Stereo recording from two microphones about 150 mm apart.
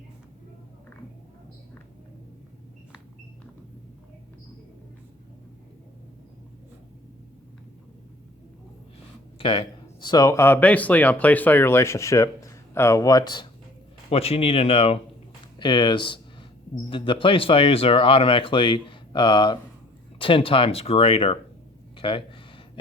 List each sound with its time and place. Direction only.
9.4 s speech: 35° left (ahead or behind)
14.1 s speech: 40° left (ahead or behind)
15.5 s speech: 30° left (ahead or behind)
21.9 s a sound: 35° left (ahead or behind)